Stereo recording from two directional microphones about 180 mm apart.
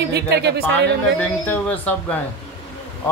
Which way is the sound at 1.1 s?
10° left (ahead or behind).